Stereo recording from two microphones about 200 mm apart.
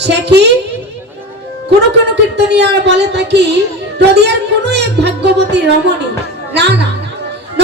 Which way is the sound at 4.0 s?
55° right (ahead or behind).